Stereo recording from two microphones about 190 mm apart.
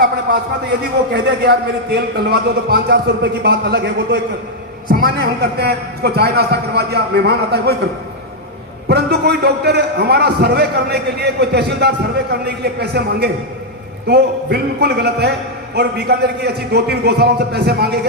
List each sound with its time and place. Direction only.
1.1 s a man's voice: 60° right (ahead or behind)
8.9 s a man's voice: 60° right (ahead or behind)